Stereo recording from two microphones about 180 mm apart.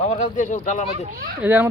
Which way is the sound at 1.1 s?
55° right (ahead or behind).